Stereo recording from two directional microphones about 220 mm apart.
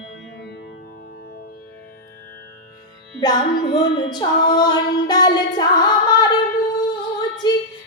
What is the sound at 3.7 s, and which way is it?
Speech, 20° left (ahead or behind).